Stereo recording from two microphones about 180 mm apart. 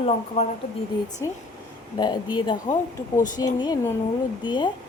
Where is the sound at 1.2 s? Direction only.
20° left (ahead or behind).